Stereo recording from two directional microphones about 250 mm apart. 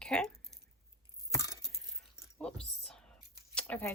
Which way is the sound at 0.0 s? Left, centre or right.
Centre.